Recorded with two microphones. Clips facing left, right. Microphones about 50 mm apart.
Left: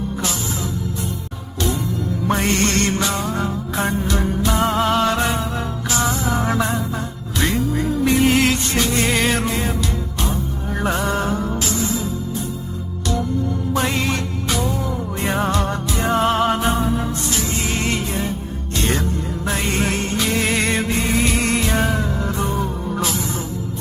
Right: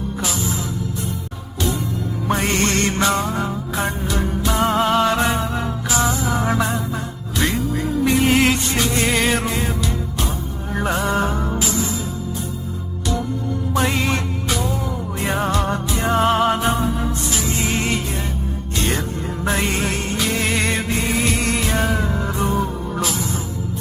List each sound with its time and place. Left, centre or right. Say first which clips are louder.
2.2 s music: even; centre
3.0 s music: right 3 dB; right
3.2 s music: even; centre
13.7 s music: right 1 dB; centre
15.1 s music: even; centre
21.9 s music: even; centre
23.0 s music: even; centre